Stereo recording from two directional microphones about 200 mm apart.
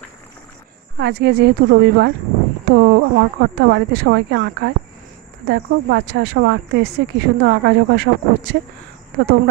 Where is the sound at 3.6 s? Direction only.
60° right (ahead or behind).